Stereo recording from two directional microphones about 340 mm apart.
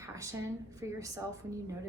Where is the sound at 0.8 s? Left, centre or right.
Centre.